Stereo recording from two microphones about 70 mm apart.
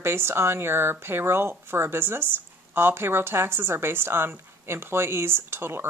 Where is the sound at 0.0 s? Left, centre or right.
Right.